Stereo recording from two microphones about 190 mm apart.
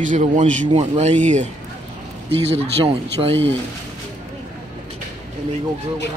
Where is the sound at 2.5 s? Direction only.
30° right (ahead or behind).